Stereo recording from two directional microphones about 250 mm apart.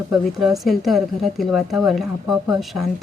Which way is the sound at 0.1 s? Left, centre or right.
Centre.